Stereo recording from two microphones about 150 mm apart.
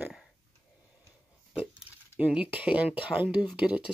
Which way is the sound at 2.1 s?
10° right (ahead or behind).